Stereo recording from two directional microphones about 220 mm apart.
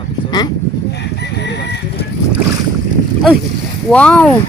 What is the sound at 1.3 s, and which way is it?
Bird, 50° left (ahead or behind).